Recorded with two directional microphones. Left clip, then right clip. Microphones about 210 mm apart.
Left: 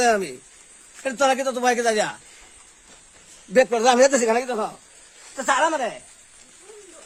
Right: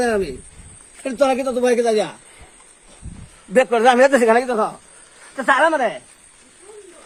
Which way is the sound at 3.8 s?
Centre (ahead or behind).